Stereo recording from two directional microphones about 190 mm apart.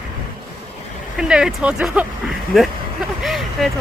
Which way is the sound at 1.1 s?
5° right (ahead or behind).